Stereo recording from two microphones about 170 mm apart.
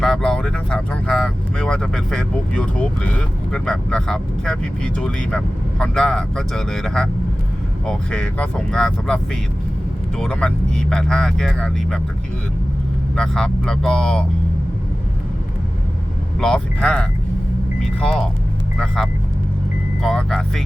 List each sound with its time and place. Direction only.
0.0 s speech: 5° left (ahead or behind)
13.1 s speech: 5° left (ahead or behind)
16.4 s speech: 5° left (ahead or behind)
20.0 s speech: centre (ahead or behind)